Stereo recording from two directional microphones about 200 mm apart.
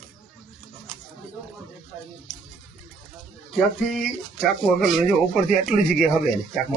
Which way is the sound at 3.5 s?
Centre (ahead or behind).